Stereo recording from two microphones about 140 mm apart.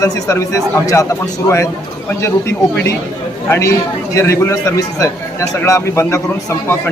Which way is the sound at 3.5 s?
20° left (ahead or behind).